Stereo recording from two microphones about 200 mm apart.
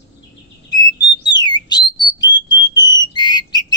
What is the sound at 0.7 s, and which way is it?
Bird, 20° left (ahead or behind).